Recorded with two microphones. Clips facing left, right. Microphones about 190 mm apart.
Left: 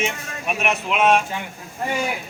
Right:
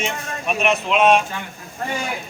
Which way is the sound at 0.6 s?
10° left (ahead or behind).